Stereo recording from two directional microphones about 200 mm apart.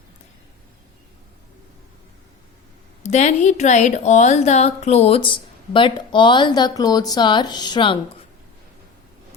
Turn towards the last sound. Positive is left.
turn(degrees=25)  # may be behind; listen again after turning